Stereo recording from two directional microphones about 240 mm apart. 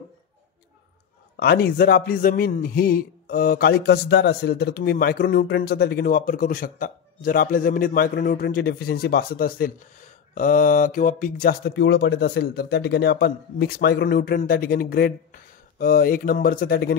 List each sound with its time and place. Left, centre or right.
1.3 s speech: left